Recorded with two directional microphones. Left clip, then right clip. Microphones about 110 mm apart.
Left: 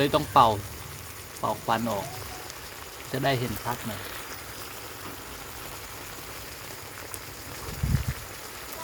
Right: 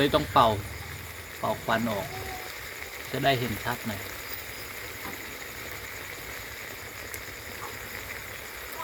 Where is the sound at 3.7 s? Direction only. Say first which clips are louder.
Left 1 dB; 30° left (ahead or behind).